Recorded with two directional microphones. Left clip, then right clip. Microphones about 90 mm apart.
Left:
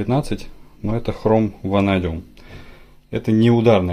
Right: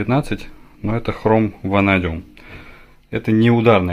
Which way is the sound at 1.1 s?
5° left (ahead or behind).